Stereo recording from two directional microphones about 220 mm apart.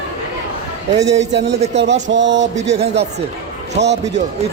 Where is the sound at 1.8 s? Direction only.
55° right (ahead or behind).